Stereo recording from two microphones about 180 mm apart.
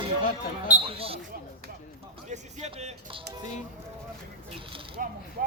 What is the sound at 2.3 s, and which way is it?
Speech, 40° right (ahead or behind).